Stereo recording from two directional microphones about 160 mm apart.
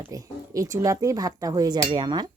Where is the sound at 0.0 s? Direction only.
20° right (ahead or behind).